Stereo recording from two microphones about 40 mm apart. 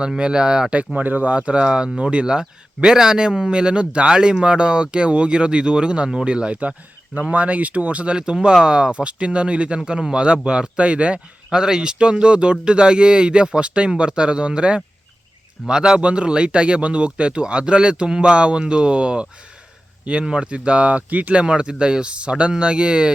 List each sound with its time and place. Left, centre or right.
0.2 s speech: right
0.9 s speech: right
1.3 s speech: right
6.6 s speech: right
8.1 s speech: right
11.5 s speech: centre; by 21.4 s right
21.4 s speech: right